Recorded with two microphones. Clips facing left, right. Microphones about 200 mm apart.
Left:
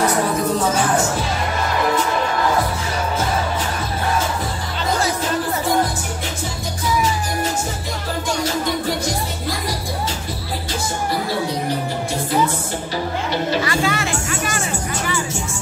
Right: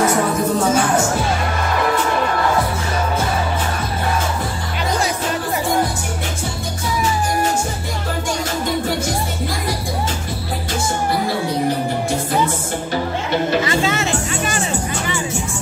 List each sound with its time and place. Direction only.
13.7 s music: 25° right (ahead or behind)